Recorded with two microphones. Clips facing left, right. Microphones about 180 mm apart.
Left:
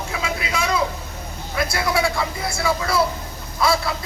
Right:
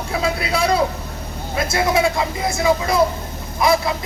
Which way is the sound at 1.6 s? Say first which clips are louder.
Right 3 dB; 20° right (ahead or behind).